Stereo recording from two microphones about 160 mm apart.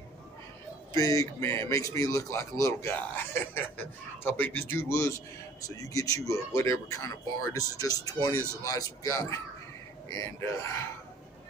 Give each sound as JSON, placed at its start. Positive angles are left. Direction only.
{"t": 0.9, "sound": "a man's voice", "side_deg": 20}